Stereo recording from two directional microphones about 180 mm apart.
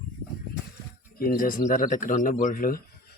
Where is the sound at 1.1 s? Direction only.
55° left (ahead or behind).